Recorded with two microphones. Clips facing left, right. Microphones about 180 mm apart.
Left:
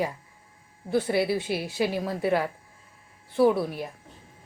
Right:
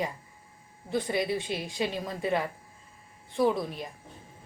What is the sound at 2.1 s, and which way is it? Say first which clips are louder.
Speech: left 4 dB; 75° left (ahead or behind).